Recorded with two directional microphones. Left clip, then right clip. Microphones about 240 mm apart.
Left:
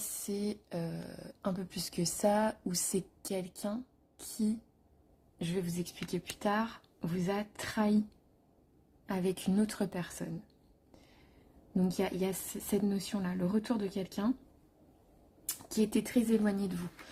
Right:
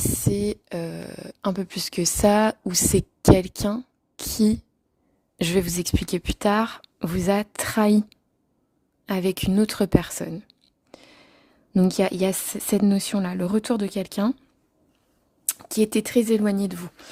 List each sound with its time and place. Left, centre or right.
0.3 s speech: right
5.4 s speech: right
9.0 s speech: right
11.7 s speech: right
15.4 s speech: right